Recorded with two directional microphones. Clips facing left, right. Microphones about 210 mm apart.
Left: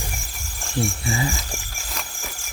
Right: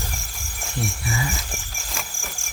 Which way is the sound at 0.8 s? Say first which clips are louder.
Left 4 dB; 25° left (ahead or behind).